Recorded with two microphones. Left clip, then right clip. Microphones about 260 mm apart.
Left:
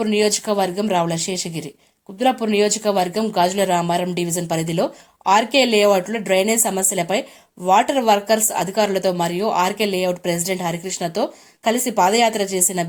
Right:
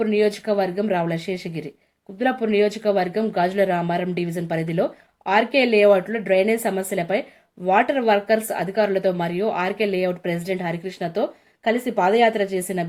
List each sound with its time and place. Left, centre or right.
0.0 s speech: centre